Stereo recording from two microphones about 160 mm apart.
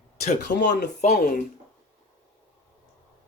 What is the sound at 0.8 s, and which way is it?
Speech, 50° left (ahead or behind).